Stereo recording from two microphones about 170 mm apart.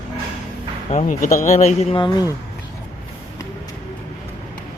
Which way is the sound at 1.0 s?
50° left (ahead or behind).